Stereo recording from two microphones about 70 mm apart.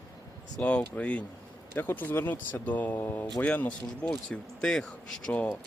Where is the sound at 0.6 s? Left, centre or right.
Left.